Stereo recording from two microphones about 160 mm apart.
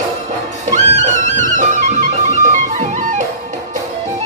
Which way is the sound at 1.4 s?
50° right (ahead or behind).